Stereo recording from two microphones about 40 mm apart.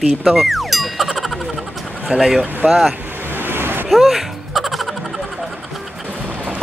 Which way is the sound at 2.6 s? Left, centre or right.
Right.